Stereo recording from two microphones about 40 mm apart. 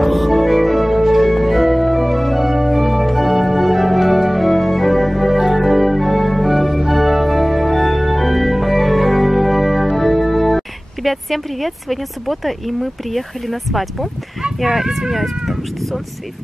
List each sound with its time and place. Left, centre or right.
0.0 s music: centre
5.4 s organ: centre
14.6 s speech: centre